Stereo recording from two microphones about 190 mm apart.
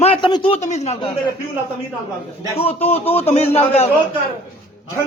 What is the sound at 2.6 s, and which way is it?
Speech, 30° left (ahead or behind).